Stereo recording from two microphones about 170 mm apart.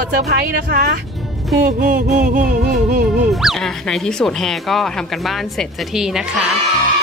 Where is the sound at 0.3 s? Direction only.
65° right (ahead or behind).